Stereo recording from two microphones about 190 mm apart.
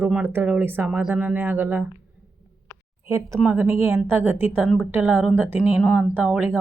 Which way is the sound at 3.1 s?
15° right (ahead or behind).